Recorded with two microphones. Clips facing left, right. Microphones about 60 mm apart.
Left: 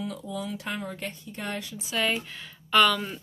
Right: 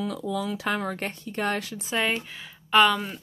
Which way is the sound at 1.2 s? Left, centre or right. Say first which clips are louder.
Right 10 dB; right.